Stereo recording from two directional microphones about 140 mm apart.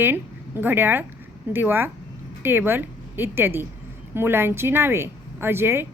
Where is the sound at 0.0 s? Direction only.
15° right (ahead or behind).